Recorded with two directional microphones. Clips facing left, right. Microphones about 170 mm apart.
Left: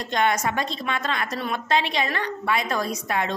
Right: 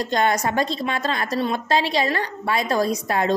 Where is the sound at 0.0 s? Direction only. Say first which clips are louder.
Right 2 dB; 35° right (ahead or behind).